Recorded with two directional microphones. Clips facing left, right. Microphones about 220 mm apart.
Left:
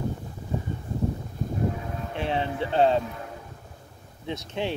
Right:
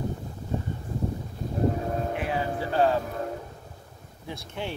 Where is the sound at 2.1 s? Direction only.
25° left (ahead or behind).